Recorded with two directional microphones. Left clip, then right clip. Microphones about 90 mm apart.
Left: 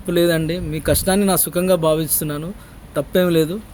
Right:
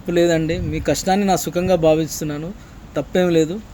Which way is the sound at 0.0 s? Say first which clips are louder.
Right 1 dB; 35° left (ahead or behind).